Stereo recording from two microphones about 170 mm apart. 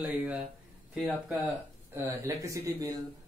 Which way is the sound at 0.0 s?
10° right (ahead or behind).